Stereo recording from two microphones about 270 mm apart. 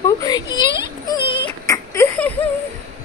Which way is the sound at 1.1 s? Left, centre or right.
Centre.